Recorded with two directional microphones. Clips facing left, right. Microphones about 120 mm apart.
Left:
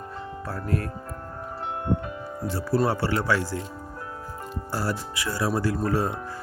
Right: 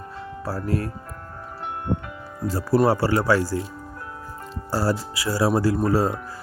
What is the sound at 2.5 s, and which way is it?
Speech, 40° right (ahead or behind).